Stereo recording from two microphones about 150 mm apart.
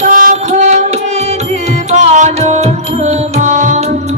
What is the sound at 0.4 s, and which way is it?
Music, 50° right (ahead or behind).